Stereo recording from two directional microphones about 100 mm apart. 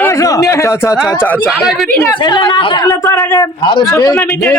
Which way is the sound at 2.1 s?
50° left (ahead or behind).